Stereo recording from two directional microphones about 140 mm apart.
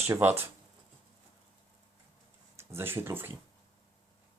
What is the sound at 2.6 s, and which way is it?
Speech, 15° right (ahead or behind).